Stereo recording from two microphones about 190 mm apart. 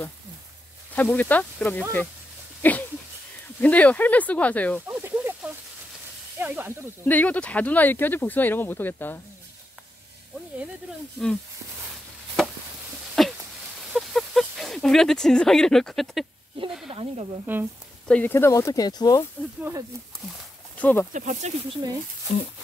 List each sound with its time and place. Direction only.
0.9 s speech: 10° left (ahead or behind)
2.6 s a sound: 10° left (ahead or behind)
3.6 s speech: 10° left (ahead or behind)
4.8 s snake: 10° right (ahead or behind)
6.3 s speech: 10° right (ahead or behind)
7.1 s speech: 10° left (ahead or behind)
11.2 s speech: centre (ahead or behind)
13.2 s a sound: centre (ahead or behind)
13.9 s speech: centre (ahead or behind)
16.9 s speech: 30° right (ahead or behind)
18.0 s speech: 10° left (ahead or behind)
20.7 s speech: 10° left (ahead or behind)
21.1 s speech: 40° right (ahead or behind)
22.3 s speech: 35° left (ahead or behind)